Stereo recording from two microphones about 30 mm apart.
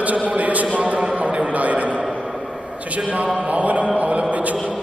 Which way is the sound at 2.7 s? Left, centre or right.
Right.